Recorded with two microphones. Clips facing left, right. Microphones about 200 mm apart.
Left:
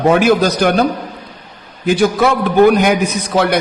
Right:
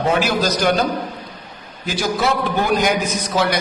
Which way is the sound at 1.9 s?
55° left (ahead or behind).